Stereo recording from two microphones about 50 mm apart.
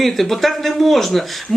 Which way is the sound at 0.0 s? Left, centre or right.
Centre.